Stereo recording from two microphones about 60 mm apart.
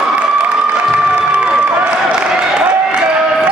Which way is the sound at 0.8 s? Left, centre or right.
Centre.